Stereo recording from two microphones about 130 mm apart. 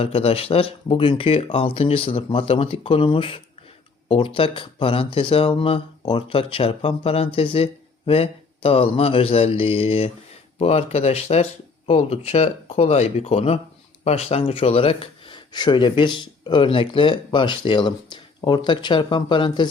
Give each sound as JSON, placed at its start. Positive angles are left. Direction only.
{"t": 0.0, "sound": "speech", "side_deg": 50}